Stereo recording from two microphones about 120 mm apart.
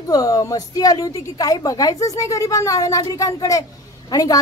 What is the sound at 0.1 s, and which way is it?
A woman's voice, 30° left (ahead or behind).